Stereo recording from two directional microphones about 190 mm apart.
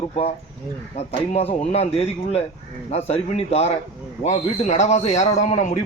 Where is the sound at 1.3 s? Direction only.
35° left (ahead or behind).